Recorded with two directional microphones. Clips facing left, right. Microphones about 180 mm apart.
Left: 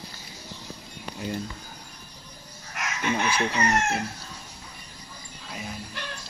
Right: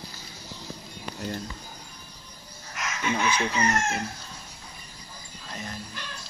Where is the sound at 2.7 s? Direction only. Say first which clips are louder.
Left 1 dB; 55° left (ahead or behind).